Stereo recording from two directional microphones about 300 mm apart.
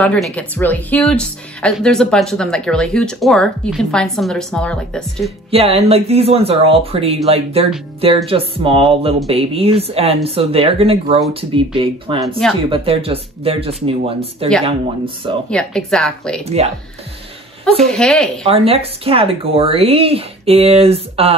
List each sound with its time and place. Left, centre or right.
0.0 s speech: centre
5.5 s speech: centre
15.5 s speech: centre
16.4 s speech: right
17.8 s speech: centre
18.5 s speech: centre